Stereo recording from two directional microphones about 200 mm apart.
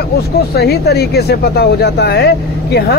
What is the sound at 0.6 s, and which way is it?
Speech, 55° left (ahead or behind).